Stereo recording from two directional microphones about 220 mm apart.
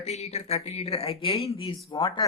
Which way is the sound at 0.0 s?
30° left (ahead or behind).